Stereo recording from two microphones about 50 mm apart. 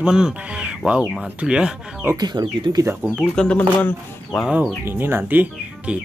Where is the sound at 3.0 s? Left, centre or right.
Right.